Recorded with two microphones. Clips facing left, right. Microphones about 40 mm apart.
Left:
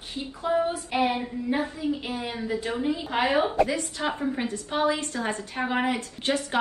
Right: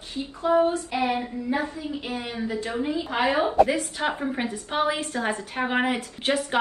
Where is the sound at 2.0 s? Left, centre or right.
Right.